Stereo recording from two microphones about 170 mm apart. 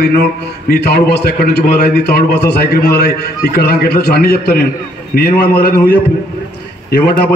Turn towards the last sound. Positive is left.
turn(degrees=70)  # may be behind; listen again after turning